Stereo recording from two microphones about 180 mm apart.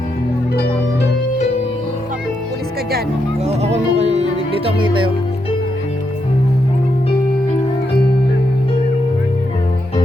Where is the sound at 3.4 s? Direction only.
35° right (ahead or behind).